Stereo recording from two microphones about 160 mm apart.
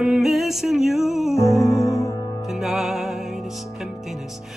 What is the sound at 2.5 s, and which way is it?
Music, centre (ahead or behind).